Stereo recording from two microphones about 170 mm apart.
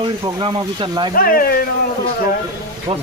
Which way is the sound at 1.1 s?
60° left (ahead or behind).